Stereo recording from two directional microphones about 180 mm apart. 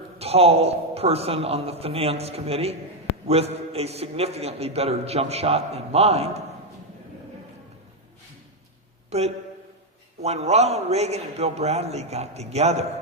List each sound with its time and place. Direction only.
0.2 s a man's voice: 35° right (ahead or behind)
9.0 s a man's voice: 35° right (ahead or behind)